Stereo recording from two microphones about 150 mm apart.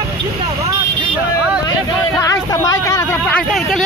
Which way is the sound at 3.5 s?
Centre (ahead or behind).